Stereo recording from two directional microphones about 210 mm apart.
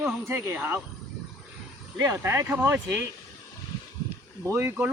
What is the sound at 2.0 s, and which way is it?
Speech, 15° right (ahead or behind).